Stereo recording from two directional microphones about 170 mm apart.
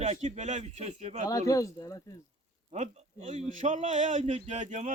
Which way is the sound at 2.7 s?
40° right (ahead or behind).